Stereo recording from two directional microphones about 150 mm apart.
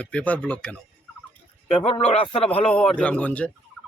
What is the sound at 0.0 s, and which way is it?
Speech, 10° left (ahead or behind).